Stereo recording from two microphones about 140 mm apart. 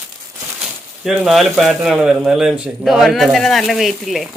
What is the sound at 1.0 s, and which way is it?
Speech, 5° right (ahead or behind).